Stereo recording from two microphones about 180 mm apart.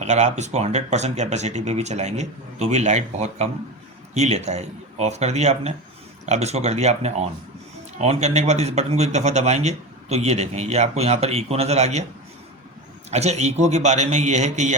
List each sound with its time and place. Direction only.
0.0 s a man's voice: 40° right (ahead or behind)
13.1 s a man's voice: 40° right (ahead or behind)